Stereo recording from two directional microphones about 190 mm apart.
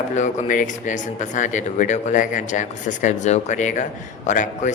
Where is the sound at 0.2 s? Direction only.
45° left (ahead or behind).